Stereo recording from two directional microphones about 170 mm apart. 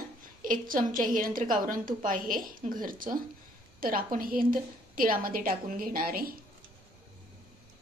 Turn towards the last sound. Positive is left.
turn(degrees=-60)  # may be behind; listen again after turning